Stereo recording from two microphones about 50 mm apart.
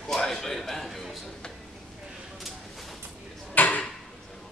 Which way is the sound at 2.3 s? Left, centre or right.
Centre.